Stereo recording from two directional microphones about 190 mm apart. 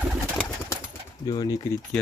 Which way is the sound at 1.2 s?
20° left (ahead or behind).